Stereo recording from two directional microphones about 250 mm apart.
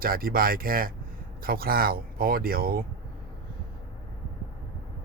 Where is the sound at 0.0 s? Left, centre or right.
Right.